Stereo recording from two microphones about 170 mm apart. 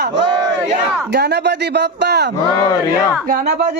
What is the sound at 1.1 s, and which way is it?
Speech, 80° right.